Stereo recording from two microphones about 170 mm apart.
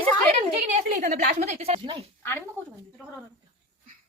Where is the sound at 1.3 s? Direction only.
40° right (ahead or behind).